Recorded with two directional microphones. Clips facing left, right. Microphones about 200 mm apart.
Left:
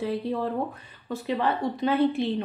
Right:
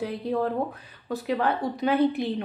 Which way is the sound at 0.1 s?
Centre (ahead or behind).